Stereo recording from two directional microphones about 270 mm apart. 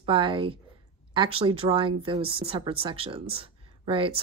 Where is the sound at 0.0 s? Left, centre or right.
Centre.